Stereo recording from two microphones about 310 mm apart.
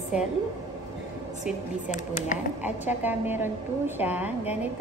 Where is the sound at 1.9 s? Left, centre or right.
Left.